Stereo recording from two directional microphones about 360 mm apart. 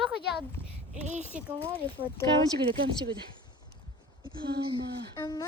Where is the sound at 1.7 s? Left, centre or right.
Centre.